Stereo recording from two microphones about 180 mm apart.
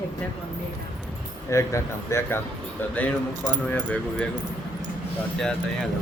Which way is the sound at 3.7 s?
10° left (ahead or behind).